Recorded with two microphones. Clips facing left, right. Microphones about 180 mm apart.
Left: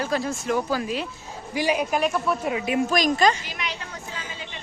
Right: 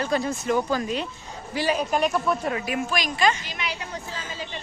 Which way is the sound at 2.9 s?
45° left (ahead or behind).